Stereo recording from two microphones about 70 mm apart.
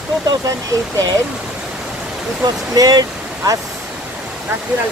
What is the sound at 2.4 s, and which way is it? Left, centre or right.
Speech, right.